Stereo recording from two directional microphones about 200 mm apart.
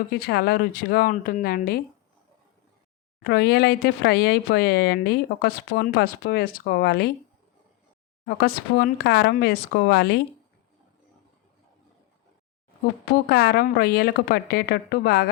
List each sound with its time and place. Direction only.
0.1 s speech: 50° left (ahead or behind)
3.2 s speech: 50° left (ahead or behind)
8.4 s speech: 50° left (ahead or behind)
13.2 s speech: 50° left (ahead or behind)